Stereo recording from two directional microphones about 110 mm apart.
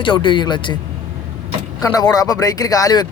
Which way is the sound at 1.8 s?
35° left (ahead or behind).